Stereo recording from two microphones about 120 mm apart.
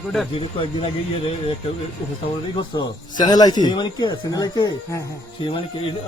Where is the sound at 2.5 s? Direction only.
35° left (ahead or behind).